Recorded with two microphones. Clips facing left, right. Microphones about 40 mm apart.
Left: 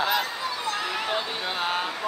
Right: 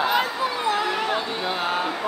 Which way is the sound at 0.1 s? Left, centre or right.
Centre.